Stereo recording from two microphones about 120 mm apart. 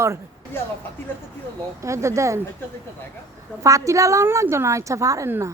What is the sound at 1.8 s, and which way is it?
Speech, 25° right (ahead or behind).